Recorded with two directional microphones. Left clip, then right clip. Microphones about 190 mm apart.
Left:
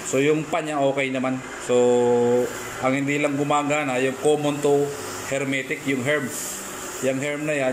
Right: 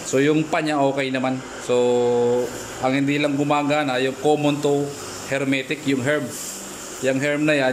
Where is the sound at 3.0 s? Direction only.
50° right (ahead or behind).